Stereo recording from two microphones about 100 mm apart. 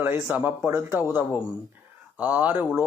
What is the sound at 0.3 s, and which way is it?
Speech, 15° right (ahead or behind).